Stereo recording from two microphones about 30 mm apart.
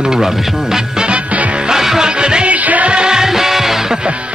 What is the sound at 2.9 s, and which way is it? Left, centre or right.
Music, right.